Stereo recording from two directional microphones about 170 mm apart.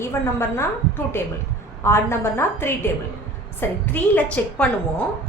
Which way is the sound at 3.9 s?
10° left (ahead or behind).